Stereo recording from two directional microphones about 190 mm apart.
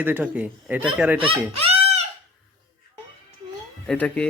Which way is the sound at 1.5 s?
30° right (ahead or behind).